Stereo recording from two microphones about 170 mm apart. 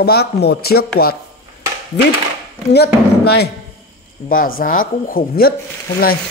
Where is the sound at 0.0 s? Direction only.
70° left (ahead or behind).